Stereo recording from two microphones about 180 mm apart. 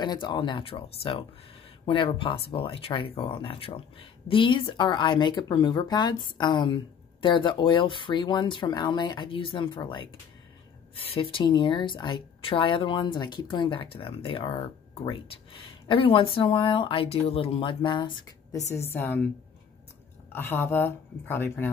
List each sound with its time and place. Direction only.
0.0 s speech: 25° left (ahead or behind)
1.9 s speech: 30° left (ahead or behind)
18.9 s speech: 10° left (ahead or behind)
20.3 s speech: 10° left (ahead or behind)